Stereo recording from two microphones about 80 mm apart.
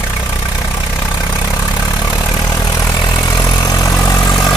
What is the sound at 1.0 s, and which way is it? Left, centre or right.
Vehicle, left.